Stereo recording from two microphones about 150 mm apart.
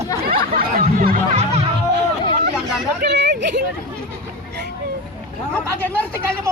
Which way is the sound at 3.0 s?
60° right (ahead or behind).